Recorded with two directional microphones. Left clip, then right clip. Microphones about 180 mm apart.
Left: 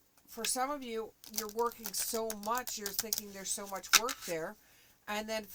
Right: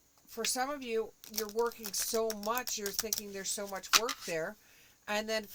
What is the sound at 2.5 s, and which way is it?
Speech, 40° right (ahead or behind).